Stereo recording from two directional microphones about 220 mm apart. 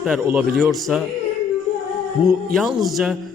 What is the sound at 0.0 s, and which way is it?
A man's voice, 5° right (ahead or behind).